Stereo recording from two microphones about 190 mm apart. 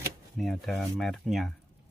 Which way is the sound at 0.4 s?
Centre (ahead or behind).